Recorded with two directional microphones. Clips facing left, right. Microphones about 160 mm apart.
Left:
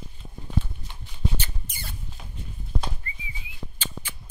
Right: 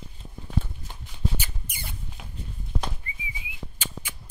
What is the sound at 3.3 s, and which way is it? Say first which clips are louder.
Whistling: even; 10° right (ahead or behind).